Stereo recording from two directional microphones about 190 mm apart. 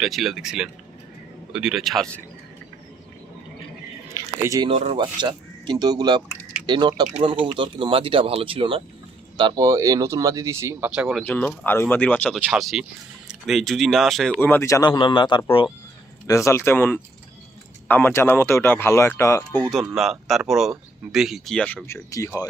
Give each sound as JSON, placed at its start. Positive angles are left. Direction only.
{"t": 0.0, "sound": "speech", "side_deg": 0}
{"t": 4.1, "sound": "a sound", "side_deg": -15}
{"t": 4.7, "sound": "speech", "side_deg": -35}
{"t": 5.1, "sound": "speech", "side_deg": -20}
{"t": 9.4, "sound": "speech", "side_deg": -15}
{"t": 11.2, "sound": "speech", "side_deg": 10}
{"t": 19.7, "sound": "speech", "side_deg": 0}
{"t": 22.1, "sound": "speech", "side_deg": 15}